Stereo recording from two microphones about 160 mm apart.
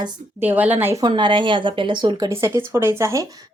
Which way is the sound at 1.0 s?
30° right (ahead or behind).